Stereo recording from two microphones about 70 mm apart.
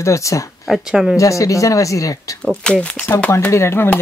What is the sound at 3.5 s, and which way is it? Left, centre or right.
Speech, left.